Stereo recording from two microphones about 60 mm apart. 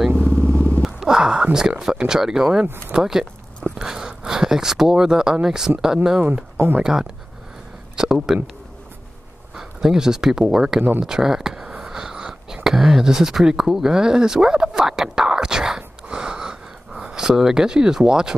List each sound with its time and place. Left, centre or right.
0.1 s vehicle: left
0.8 s a sound: centre
1.8 s speech: centre
6.2 s speech: right
6.8 s speech: centre
9.6 s speech: centre
10.8 s speech: right
11.1 s a sound: centre